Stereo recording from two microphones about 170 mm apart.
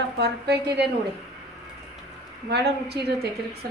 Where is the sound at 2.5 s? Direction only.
75° right (ahead or behind).